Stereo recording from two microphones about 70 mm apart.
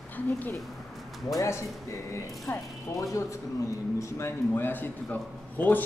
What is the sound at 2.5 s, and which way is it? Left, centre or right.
Speech, left.